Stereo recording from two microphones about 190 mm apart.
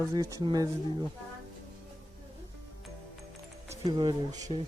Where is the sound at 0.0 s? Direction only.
15° right (ahead or behind).